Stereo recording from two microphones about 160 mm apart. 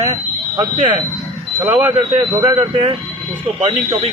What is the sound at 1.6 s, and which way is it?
Speech, 15° right (ahead or behind).